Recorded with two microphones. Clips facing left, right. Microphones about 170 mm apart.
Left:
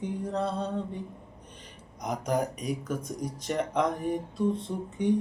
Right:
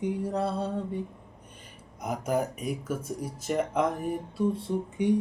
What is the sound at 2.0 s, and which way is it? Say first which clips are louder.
Speech: even; 5° right (ahead or behind).